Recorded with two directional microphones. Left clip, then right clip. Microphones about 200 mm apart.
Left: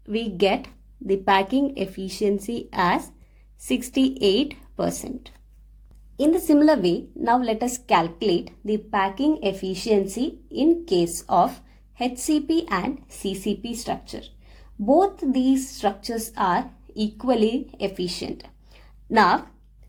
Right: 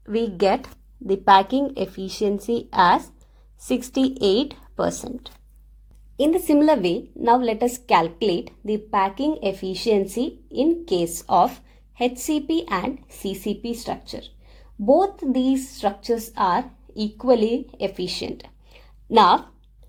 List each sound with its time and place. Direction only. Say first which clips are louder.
0.1 s speech: right 2 dB; 20° right (ahead or behind)
4.4 s a woman's voice: right 1 dB; 25° right (ahead or behind)
6.1 s speech: even; 25° right (ahead or behind)